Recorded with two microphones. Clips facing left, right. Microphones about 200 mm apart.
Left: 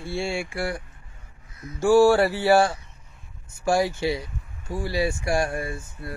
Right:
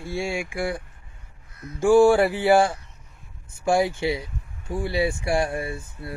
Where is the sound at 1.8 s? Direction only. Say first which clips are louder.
Right 1 dB; 15° right (ahead or behind).